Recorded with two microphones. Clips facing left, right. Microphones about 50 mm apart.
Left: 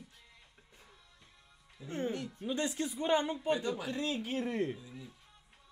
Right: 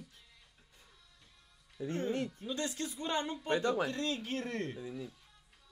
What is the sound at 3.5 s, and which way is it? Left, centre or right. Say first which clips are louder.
Speech: right 5 dB; right.